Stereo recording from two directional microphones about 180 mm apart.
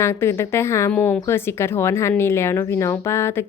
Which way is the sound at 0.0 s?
15° left (ahead or behind).